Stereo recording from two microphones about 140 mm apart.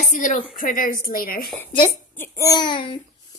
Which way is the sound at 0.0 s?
65° left (ahead or behind).